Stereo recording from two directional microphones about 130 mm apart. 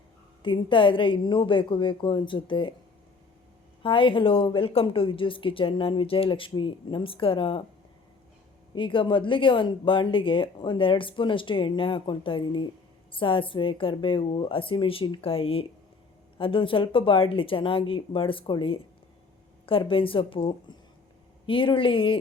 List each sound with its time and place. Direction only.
0.4 s speech: 40° left (ahead or behind)
3.8 s speech: 40° left (ahead or behind)
8.7 s speech: 40° left (ahead or behind)